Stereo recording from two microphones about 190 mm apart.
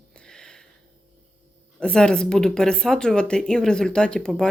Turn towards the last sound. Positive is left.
turn(degrees=5)  # may be behind; listen again after turning